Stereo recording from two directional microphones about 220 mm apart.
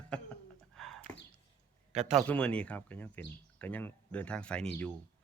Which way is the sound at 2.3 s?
5° left (ahead or behind).